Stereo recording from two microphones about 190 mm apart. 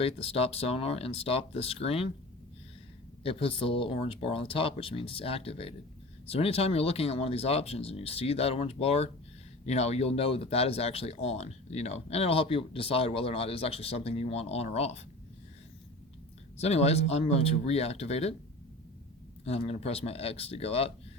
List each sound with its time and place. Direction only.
0.0 s speech: 30° left (ahead or behind)
3.2 s speech: 30° left (ahead or behind)
16.6 s speech: 35° left (ahead or behind)
19.5 s speech: 35° left (ahead or behind)